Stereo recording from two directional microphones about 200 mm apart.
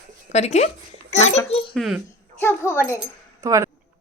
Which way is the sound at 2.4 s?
10° left (ahead or behind).